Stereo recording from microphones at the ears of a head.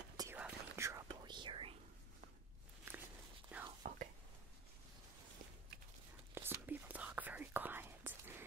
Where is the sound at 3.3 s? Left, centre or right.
Right.